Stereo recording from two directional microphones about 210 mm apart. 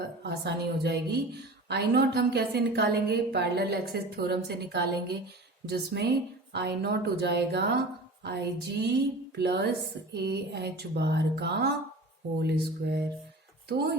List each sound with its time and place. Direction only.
0.2 s a woman's voice: 50° right (ahead or behind)